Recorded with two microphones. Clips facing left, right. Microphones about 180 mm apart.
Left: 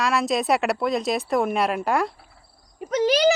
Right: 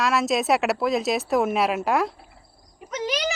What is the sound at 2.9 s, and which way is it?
Speech, 30° left (ahead or behind).